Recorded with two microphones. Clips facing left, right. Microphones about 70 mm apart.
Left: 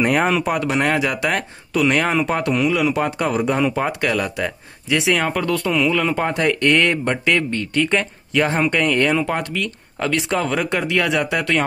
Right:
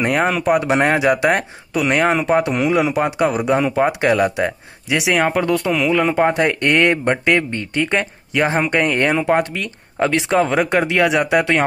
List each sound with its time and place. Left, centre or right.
0.0 s speech: centre
0.6 s speech: right
2.5 s speech: right
2.9 s speech: centre